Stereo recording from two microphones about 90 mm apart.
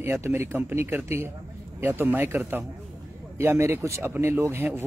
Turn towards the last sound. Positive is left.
turn(degrees=-30)  # may be behind; listen again after turning